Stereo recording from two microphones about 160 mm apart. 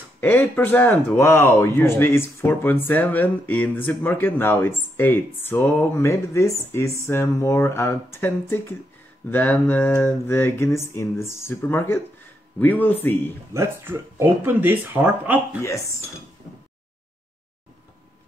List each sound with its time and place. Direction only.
0.2 s speech: 10° left (ahead or behind)
13.5 s speech: 15° right (ahead or behind)